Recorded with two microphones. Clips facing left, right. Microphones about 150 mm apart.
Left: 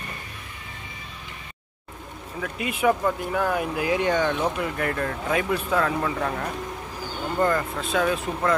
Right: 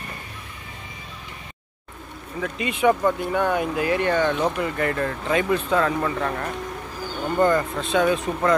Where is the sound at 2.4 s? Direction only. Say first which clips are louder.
Right 3 dB; 5° left (ahead or behind).